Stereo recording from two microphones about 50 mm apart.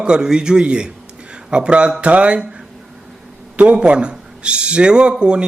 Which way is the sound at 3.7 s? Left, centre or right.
Right.